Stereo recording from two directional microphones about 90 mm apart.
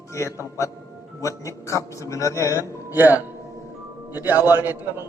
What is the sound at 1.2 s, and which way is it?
A man's voice, 35° left (ahead or behind).